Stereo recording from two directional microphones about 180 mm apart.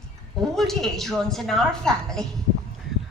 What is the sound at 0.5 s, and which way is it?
A woman's voice, centre (ahead or behind).